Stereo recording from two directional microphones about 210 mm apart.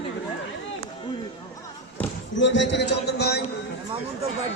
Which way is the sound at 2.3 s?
60° left (ahead or behind).